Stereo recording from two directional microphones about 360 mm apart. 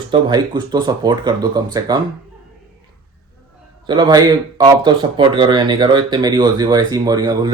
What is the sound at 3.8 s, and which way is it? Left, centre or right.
Speech, centre.